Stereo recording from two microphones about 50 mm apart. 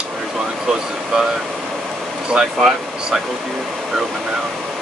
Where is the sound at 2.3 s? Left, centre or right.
Centre.